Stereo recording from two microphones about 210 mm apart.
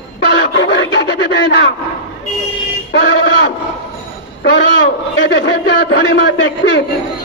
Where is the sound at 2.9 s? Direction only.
55° left (ahead or behind).